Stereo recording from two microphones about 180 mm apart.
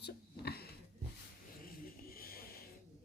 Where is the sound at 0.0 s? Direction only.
60° left (ahead or behind).